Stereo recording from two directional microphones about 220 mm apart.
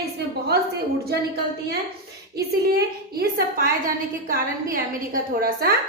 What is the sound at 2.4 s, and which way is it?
A woman's voice, 45° right (ahead or behind).